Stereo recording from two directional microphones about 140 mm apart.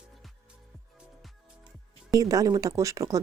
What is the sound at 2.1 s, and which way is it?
Speech, 25° right (ahead or behind).